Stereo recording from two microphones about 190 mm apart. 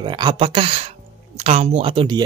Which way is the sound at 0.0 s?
25° right (ahead or behind).